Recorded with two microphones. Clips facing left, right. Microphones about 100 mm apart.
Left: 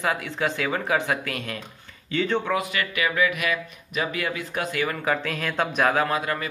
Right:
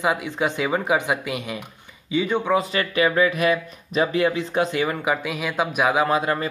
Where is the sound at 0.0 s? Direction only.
15° right (ahead or behind).